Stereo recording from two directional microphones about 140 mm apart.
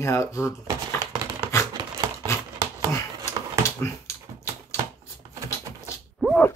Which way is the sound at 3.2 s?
20° left (ahead or behind).